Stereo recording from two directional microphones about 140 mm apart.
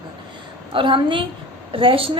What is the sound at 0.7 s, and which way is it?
A woman's voice, 40° right (ahead or behind).